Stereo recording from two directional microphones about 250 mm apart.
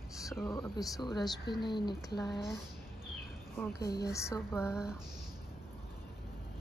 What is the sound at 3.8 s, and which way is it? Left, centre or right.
Speech, centre.